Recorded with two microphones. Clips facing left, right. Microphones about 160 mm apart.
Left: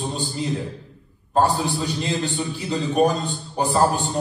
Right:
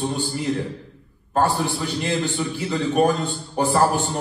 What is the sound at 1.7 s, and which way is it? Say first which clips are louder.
A man's voice: right 1 dB; 20° left (ahead or behind).